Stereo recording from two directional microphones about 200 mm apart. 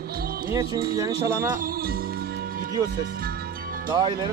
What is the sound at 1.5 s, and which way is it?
Music, 45° right (ahead or behind).